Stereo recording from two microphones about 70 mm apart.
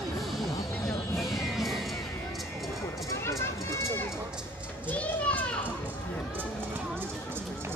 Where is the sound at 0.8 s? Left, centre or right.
Centre.